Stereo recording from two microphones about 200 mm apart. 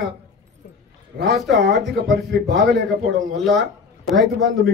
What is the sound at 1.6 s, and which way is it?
Speech, 55° right (ahead or behind).